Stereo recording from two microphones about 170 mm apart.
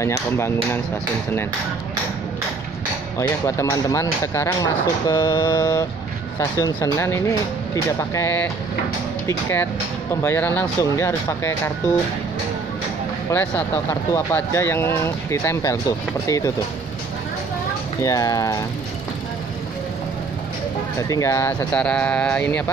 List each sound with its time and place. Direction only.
0.0 s speech: 15° left (ahead or behind)
3.2 s speech: 20° left (ahead or behind)
10.2 s speech: 10° left (ahead or behind)
13.3 s speech: 10° left (ahead or behind)
18.0 s speech: 20° left (ahead or behind)
21.1 s speech: 20° left (ahead or behind)